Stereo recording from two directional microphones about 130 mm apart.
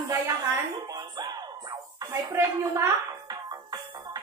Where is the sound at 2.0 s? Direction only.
20° right (ahead or behind).